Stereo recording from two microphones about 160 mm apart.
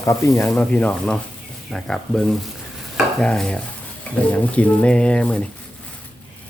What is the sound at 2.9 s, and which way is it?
Stir, 5° left (ahead or behind).